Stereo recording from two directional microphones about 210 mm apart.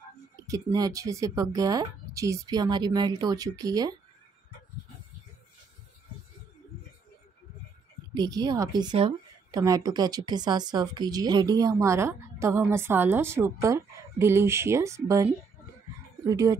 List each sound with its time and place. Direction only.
0.5 s a woman's voice: 20° right (ahead or behind)
8.1 s a woman's voice: 20° right (ahead or behind)
16.3 s a woman's voice: 15° right (ahead or behind)